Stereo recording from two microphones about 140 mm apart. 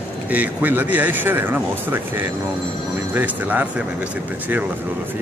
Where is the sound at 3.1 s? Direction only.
10° right (ahead or behind).